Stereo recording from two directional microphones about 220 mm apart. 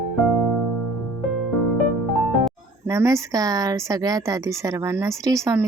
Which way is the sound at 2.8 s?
15° right (ahead or behind).